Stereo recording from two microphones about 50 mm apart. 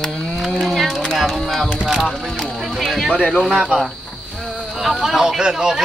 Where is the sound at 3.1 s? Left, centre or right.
Centre.